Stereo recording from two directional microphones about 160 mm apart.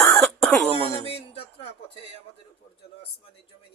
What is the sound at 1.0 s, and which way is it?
Music, 35° left (ahead or behind).